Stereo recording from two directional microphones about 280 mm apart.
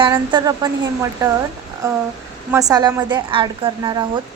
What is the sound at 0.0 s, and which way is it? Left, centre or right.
Speech, centre.